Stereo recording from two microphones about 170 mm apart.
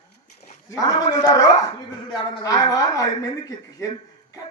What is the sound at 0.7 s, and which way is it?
A man's voice, 20° left (ahead or behind).